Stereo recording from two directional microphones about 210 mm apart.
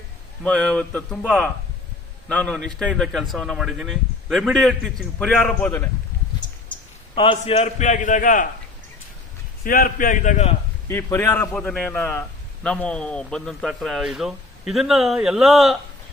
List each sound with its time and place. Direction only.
0.4 s a man's voice: 5° left (ahead or behind)
7.2 s a man's voice: 25° left (ahead or behind)
9.6 s a man's voice: 45° left (ahead or behind)
10.8 s a man's voice: 10° left (ahead or behind)